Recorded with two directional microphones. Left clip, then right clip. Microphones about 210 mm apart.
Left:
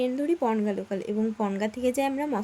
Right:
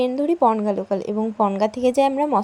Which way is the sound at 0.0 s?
20° right (ahead or behind).